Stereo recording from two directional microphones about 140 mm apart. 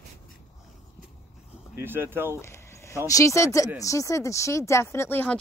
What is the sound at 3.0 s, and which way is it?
Speech, 25° left (ahead or behind).